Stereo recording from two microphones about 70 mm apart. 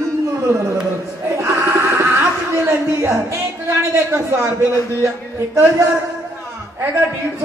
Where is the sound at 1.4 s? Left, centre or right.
Right.